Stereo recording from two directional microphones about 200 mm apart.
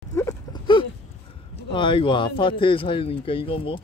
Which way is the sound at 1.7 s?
25° left (ahead or behind).